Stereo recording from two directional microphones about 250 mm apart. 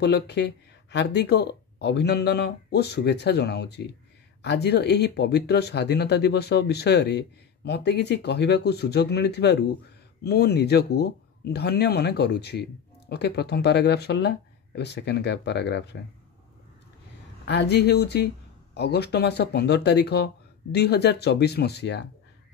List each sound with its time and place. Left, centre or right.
0.0 s speech: left
17.5 s speech: left